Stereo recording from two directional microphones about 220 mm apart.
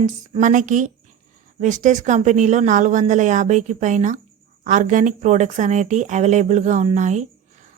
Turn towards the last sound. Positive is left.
turn(degrees=-30)  # may be behind; listen again after turning